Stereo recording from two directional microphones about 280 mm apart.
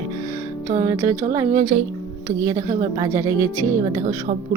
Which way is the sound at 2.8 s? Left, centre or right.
Centre.